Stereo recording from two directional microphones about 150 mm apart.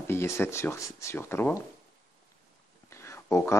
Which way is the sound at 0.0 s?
15° left (ahead or behind).